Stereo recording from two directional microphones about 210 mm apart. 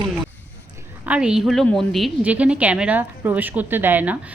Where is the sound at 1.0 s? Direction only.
5° right (ahead or behind).